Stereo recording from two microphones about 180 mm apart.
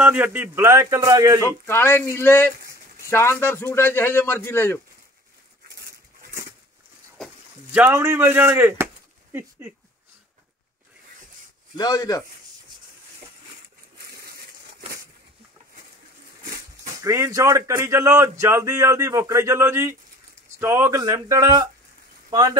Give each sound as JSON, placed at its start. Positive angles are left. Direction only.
{"t": 0.0, "sound": "speech", "side_deg": -10}
{"t": 1.7, "sound": "a man's voice", "side_deg": 15}
{"t": 7.2, "sound": "a sound", "side_deg": 0}
{"t": 7.7, "sound": "speech", "side_deg": -10}
{"t": 11.7, "sound": "speech", "side_deg": 20}
{"t": 17.0, "sound": "speech", "side_deg": -15}